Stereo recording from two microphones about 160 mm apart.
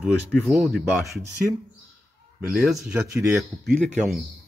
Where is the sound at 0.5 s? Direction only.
Centre (ahead or behind).